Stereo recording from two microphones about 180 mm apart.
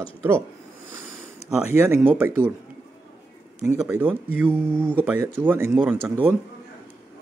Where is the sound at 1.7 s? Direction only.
15° right (ahead or behind).